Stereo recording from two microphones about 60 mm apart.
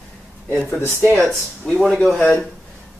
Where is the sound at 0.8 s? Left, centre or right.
Left.